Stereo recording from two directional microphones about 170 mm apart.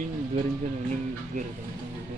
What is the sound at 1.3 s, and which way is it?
Speech, 50° right (ahead or behind).